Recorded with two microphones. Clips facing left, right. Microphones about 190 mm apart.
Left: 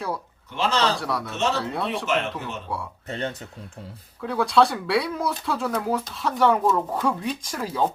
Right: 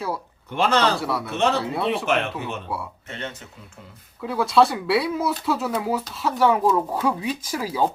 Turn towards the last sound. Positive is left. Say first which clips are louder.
# right 2 dB
turn(degrees=-5)  # may be behind; listen again after turning